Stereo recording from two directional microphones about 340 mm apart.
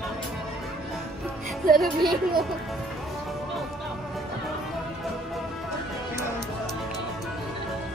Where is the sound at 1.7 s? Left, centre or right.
Centre.